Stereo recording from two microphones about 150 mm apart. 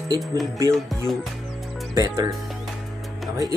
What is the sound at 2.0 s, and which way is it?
Speech, 25° right (ahead or behind).